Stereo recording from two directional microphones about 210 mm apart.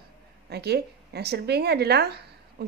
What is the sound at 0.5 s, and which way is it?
Speech, 50° right (ahead or behind).